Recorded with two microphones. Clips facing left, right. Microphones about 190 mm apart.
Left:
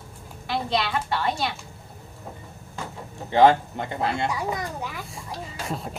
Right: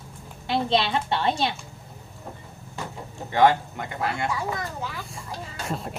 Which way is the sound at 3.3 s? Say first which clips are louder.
Left 2 dB; 25° left (ahead or behind).